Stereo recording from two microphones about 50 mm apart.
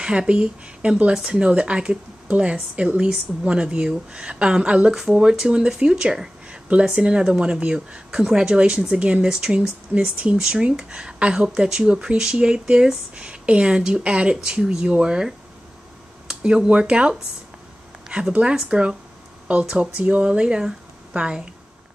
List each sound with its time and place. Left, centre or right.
0.0 s speech: centre
10.3 s speech: centre
18.0 s a sound: centre
18.5 s a woman's voice: centre